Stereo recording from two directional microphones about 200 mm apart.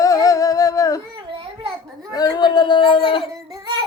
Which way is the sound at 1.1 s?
25° right (ahead or behind).